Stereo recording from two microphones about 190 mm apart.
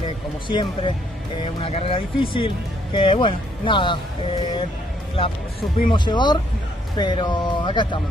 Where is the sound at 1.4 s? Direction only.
30° left (ahead or behind).